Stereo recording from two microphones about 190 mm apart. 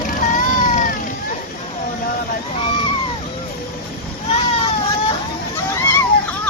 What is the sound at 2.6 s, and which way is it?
Screaming, 25° left (ahead or behind).